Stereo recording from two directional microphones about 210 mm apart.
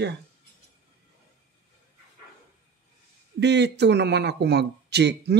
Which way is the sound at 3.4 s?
55° right (ahead or behind).